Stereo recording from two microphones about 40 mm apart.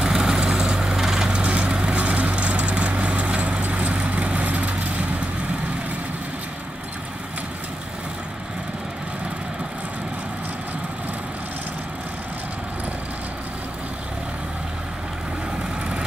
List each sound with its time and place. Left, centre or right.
0.0 s vehicle: centre
1.3 s vehicle: right